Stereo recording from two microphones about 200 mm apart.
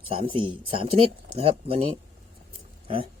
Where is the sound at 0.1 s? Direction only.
25° right (ahead or behind).